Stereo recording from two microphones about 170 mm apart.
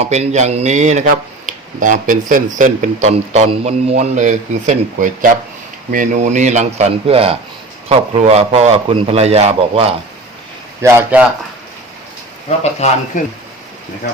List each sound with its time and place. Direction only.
0.0 s speech: 40° right (ahead or behind)
10.8 s speech: 10° right (ahead or behind)
12.5 s speech: 40° left (ahead or behind)